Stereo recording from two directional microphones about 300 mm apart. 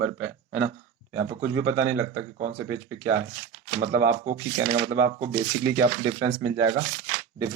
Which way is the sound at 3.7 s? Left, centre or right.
Right.